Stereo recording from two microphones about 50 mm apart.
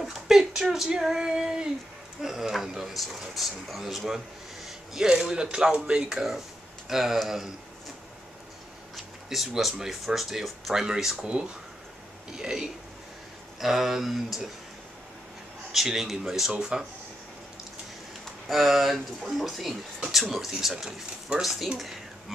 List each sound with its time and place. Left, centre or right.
0.0 s a man's voice: centre
8.9 s speech: centre
11.1 s speech: right; by 14.5 s centre
15.7 s speech: centre
16.5 s speech: centre
18.2 s speech: centre